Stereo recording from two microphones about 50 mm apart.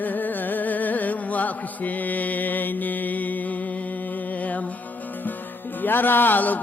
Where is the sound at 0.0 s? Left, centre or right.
Left.